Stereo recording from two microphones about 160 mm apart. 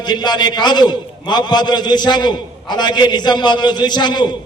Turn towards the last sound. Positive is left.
turn(degrees=30)  # may be behind; listen again after turning